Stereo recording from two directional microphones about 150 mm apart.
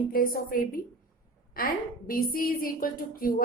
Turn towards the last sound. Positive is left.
turn(degrees=70)  # may be behind; listen again after turning